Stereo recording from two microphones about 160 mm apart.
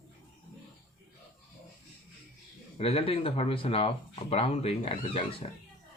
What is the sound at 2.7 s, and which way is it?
Speech, 35° left (ahead or behind).